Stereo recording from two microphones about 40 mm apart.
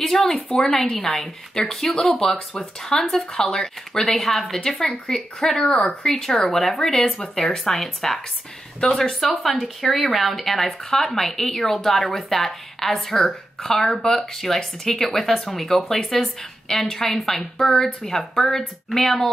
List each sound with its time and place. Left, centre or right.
0.3 s speech: centre
7.5 s speech: centre
8.8 s speech: left
9.4 s speech: centre
17.6 s speech: centre